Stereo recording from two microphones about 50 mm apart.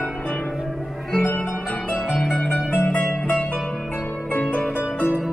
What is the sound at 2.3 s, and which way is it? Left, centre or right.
Music, centre.